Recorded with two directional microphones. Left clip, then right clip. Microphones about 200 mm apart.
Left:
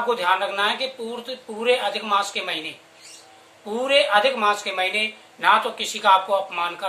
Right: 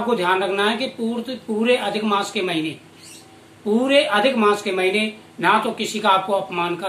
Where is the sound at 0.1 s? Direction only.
10° left (ahead or behind).